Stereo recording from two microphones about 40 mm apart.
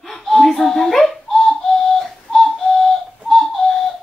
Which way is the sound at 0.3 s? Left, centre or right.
Centre.